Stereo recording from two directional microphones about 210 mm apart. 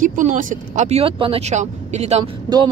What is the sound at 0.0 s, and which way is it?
Speech, 40° right (ahead or behind).